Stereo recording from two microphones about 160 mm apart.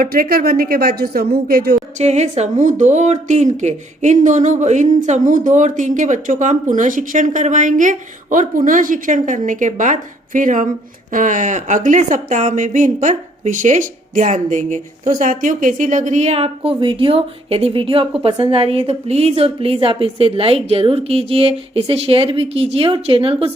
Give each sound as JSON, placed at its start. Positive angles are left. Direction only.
{"t": 0.0, "sound": "a woman's voice", "side_deg": -65}
{"t": 2.0, "sound": "a woman's voice", "side_deg": -45}